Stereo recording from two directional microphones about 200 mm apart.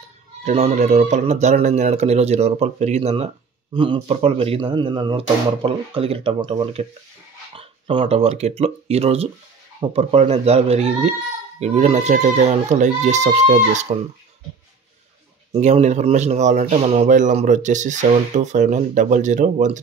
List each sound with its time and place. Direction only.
0.4 s speech: 35° right (ahead or behind)
15.5 s speech: 35° right (ahead or behind)